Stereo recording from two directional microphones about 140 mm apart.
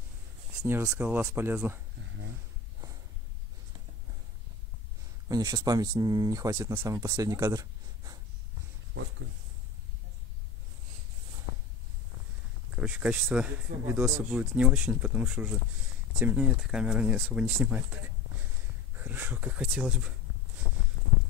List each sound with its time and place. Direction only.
0.7 s speech: 15° right (ahead or behind)
5.3 s speech: 25° right (ahead or behind)
12.7 s speech: 10° right (ahead or behind)
18.9 s speech: 15° right (ahead or behind)